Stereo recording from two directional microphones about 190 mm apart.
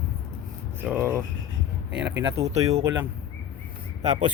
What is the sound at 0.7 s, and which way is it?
Speech, 10° right (ahead or behind).